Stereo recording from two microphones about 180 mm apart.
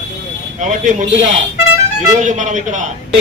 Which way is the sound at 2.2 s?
45° right (ahead or behind).